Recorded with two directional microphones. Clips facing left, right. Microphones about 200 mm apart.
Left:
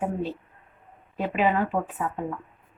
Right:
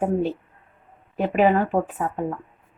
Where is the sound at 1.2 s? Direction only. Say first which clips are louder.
Right 5 dB; 45° right (ahead or behind).